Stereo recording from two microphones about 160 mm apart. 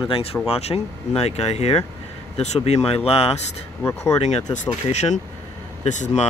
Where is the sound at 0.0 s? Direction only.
35° left (ahead or behind).